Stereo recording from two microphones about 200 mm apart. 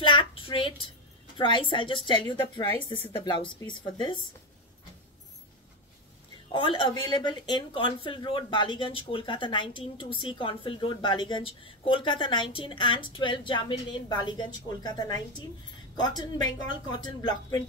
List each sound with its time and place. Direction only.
0.0 s a sound: 25° left (ahead or behind)
1.4 s speech: 25° left (ahead or behind)
6.5 s speech: 25° left (ahead or behind)